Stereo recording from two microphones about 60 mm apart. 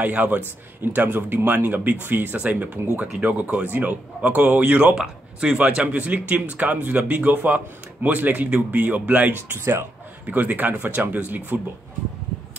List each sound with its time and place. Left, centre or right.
0.0 s speech: right
3.1 s speech: centre
3.3 s speech: right
4.9 s speech: centre
5.6 s speech: right
9.5 s speech: right
10.2 s speech: right